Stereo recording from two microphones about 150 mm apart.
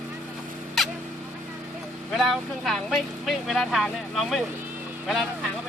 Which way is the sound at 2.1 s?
Centre (ahead or behind).